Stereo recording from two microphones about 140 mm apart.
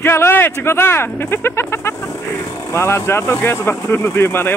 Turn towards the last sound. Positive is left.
turn(degrees=15)  # may be behind; listen again after turning